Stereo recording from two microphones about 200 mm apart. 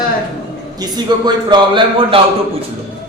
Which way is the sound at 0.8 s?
20° right (ahead or behind).